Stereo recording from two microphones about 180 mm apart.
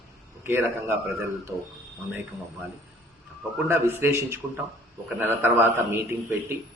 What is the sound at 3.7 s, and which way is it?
A man's voice, 15° right (ahead or behind).